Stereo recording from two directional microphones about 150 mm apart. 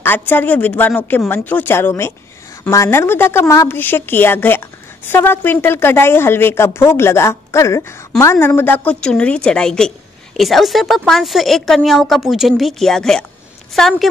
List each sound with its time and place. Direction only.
0.0 s a woman's voice: 15° left (ahead or behind)